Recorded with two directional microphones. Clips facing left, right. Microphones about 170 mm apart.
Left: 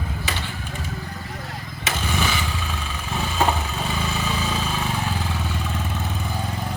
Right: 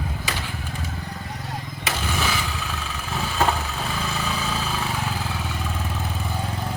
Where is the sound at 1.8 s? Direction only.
Centre (ahead or behind).